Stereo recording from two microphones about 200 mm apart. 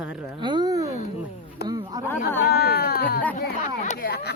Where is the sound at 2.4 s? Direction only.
50° left (ahead or behind).